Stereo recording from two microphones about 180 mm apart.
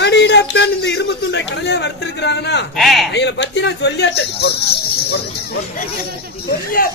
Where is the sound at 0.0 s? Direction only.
75° left (ahead or behind).